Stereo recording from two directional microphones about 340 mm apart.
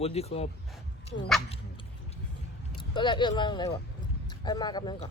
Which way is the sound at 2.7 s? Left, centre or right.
Centre.